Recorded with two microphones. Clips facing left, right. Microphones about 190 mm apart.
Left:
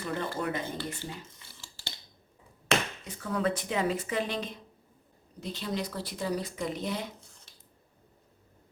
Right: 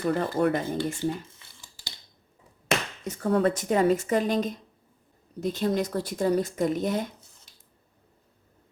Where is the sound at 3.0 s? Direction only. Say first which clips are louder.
Right 7 dB; 45° right (ahead or behind).